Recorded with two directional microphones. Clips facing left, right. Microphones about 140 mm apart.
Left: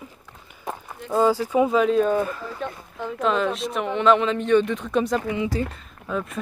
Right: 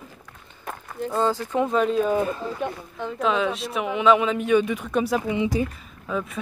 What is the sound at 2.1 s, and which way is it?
Speech, 20° right (ahead or behind).